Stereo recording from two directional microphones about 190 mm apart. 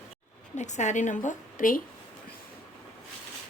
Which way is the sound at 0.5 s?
40° left (ahead or behind).